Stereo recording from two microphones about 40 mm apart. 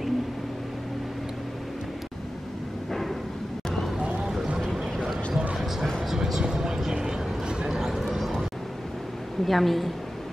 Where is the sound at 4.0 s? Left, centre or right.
Right.